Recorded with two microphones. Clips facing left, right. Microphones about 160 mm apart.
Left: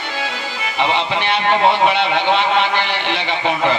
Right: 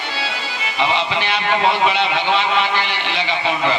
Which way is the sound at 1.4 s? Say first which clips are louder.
Left 3 dB; 55° left (ahead or behind).